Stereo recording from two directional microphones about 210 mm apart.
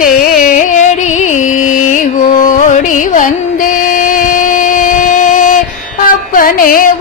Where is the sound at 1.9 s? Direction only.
40° left (ahead or behind).